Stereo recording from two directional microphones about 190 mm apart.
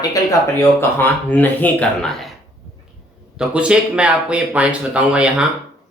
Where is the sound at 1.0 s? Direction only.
10° left (ahead or behind).